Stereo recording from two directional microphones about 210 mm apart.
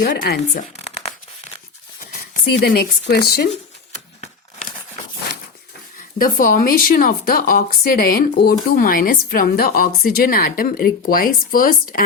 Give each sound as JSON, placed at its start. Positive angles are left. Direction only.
{"t": 0.2, "sound": "tearing", "side_deg": 40}
{"t": 3.1, "sound": "a woman's voice", "side_deg": 45}
{"t": 6.1, "sound": "a woman's voice", "side_deg": 40}